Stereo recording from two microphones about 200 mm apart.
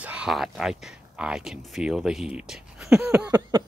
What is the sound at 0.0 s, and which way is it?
Speech, 5° right (ahead or behind).